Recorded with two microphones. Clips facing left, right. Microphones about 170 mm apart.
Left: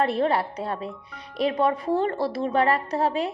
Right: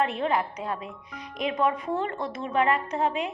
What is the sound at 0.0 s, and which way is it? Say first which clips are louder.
A woman's voice: left 3 dB; 35° left (ahead or behind).